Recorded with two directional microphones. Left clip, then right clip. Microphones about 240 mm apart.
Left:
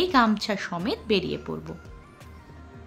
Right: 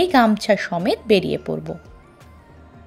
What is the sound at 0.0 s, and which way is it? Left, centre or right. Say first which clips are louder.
A woman's voice: right 5 dB; right.